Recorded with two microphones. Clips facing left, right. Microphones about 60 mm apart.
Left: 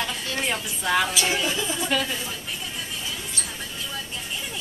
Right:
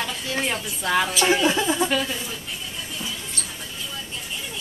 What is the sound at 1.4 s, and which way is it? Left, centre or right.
Speech, right.